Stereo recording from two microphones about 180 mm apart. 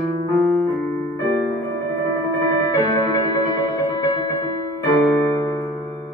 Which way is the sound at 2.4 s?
25° left (ahead or behind).